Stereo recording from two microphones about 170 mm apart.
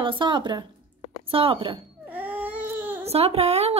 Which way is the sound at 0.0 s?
30° right (ahead or behind).